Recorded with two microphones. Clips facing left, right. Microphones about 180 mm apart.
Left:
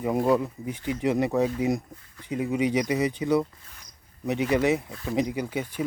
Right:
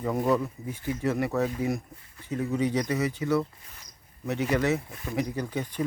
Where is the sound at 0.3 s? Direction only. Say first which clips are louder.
Left 2 dB; 15° left (ahead or behind).